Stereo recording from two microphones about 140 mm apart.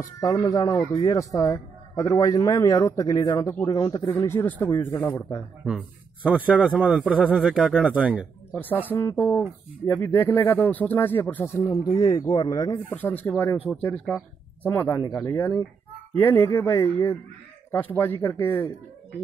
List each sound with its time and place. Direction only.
0.0 s a man's voice: 25° left (ahead or behind)
4.3 s speech: 15° left (ahead or behind)
5.7 s a man's voice: 10° right (ahead or behind)
8.5 s a man's voice: 15° left (ahead or behind)
12.9 s a man's voice: 15° left (ahead or behind)